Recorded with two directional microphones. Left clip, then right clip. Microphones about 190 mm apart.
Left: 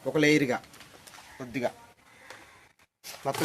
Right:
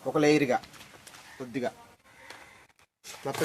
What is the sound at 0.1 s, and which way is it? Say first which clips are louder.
Speech: even; 55° left (ahead or behind).